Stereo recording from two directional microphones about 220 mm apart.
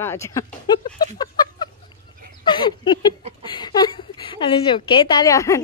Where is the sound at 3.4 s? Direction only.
20° left (ahead or behind).